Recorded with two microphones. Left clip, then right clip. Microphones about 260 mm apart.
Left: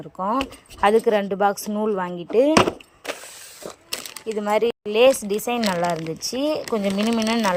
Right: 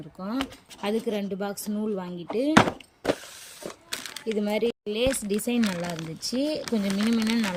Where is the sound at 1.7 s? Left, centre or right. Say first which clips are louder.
Left 8 dB; left.